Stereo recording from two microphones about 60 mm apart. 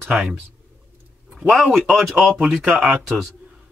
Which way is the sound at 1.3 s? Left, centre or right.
Centre.